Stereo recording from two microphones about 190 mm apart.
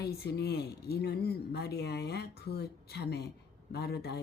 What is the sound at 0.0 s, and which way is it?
Speech, 55° left (ahead or behind).